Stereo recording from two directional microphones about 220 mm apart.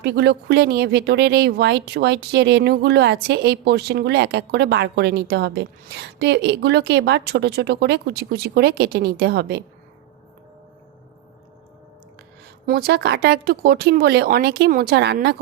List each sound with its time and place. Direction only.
0.0 s speech: 50° right (ahead or behind)
12.6 s speech: 45° right (ahead or behind)